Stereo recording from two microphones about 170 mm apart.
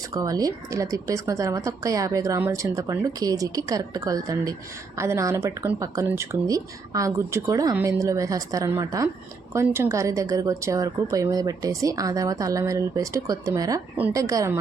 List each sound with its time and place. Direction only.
0.1 s speech: 20° right (ahead or behind)